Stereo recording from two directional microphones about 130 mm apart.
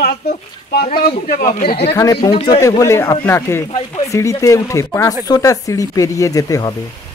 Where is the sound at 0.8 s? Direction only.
85° left.